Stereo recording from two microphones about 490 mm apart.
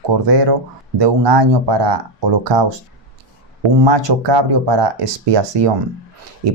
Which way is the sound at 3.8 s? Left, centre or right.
Right.